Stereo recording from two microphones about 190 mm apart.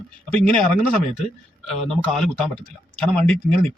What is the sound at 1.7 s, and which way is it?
A man's voice, centre (ahead or behind).